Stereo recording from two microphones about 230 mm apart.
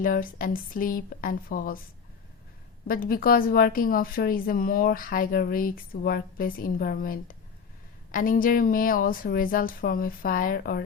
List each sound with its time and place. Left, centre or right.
0.0 s a woman's voice: left
2.8 s a woman's voice: left